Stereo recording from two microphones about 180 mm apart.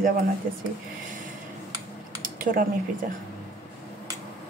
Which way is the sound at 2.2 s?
50° right (ahead or behind).